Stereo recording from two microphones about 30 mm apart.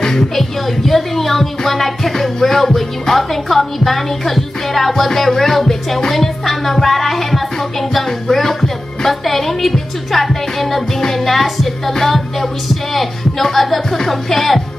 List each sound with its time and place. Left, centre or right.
0.0 s a woman's voice: centre